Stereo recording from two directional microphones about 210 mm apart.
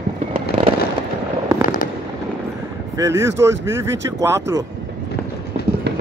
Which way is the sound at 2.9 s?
15° right (ahead or behind).